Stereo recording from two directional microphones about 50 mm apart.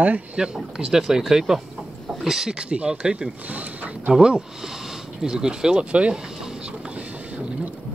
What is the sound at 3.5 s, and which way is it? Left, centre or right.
Speech, right.